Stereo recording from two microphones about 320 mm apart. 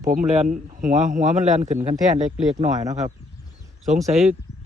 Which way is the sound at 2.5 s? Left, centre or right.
Centre.